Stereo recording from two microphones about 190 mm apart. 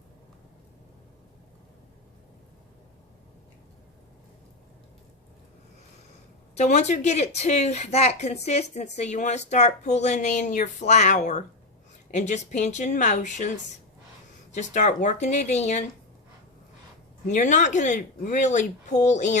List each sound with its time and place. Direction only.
6.6 s a woman's voice: 35° left (ahead or behind)
14.5 s a woman's voice: 40° left (ahead or behind)
17.2 s a woman's voice: 40° left (ahead or behind)